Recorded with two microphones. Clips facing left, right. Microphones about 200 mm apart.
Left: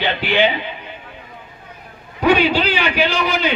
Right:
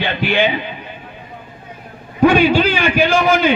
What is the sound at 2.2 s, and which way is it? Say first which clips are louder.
A man's voice: right 4 dB; 50° right (ahead or behind).